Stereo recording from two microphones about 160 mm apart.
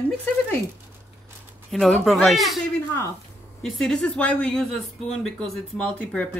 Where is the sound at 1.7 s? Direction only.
Centre (ahead or behind).